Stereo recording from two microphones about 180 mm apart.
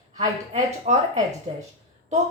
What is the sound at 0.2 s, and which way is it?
A woman's voice, 40° right (ahead or behind).